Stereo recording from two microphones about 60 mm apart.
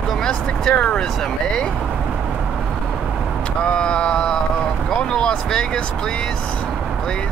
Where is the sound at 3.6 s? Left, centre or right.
Centre.